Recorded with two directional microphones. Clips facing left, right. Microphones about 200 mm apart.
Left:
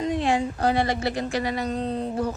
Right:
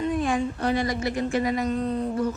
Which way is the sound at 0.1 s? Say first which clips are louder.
Left 4 dB; 80° left.